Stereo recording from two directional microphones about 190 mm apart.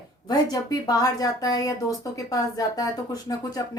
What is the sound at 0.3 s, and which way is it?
Speech, 20° left (ahead or behind).